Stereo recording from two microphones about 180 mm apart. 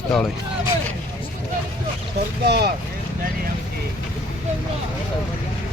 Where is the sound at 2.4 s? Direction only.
60° right (ahead or behind).